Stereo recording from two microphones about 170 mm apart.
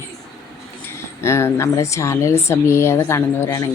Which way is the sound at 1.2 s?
15° left (ahead or behind).